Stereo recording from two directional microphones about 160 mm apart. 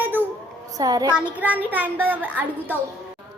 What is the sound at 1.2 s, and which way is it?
A woman's voice, 10° right (ahead or behind).